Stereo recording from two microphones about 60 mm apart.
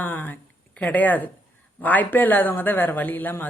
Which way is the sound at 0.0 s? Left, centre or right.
Left.